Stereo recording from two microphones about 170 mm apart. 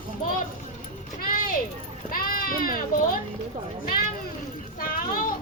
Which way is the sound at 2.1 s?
55° left (ahead or behind).